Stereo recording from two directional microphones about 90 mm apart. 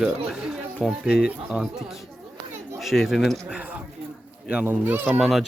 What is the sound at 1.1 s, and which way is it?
Speech, 10° right (ahead or behind).